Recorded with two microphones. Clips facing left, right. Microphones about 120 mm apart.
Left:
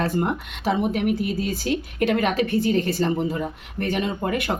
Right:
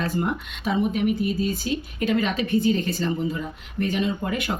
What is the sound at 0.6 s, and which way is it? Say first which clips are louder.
Speech: left 1 dB; 70° left (ahead or behind).